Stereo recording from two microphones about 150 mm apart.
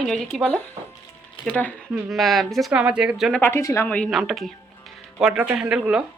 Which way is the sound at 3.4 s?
15° left (ahead or behind).